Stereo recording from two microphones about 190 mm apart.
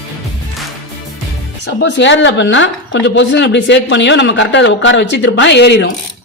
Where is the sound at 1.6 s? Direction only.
70° left (ahead or behind).